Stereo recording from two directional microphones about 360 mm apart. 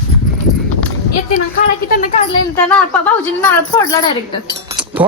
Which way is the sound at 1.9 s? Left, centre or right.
Left.